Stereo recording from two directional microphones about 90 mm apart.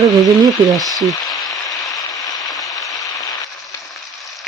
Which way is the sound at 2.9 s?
40° left (ahead or behind).